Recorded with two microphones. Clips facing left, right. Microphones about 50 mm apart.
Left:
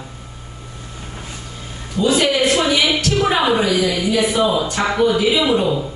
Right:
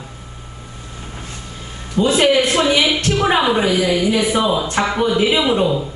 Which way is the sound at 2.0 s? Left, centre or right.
Right.